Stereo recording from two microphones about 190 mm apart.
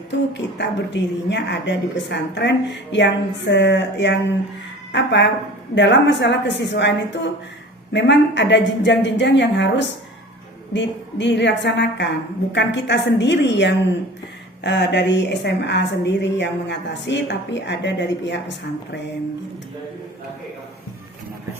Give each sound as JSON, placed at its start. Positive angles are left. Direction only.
{"t": 0.1, "sound": "a woman's voice", "side_deg": 65}